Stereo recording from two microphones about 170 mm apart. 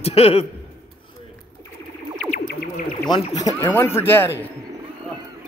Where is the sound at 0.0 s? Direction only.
35° left (ahead or behind).